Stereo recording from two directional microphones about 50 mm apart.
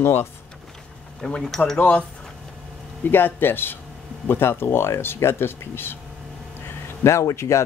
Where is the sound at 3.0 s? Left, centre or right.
Left.